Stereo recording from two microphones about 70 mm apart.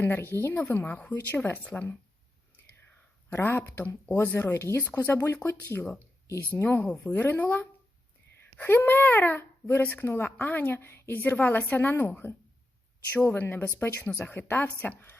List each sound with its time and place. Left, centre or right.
0.0 s speech: left
3.2 s speech: left
6.4 s speech: left
13.2 s speech: left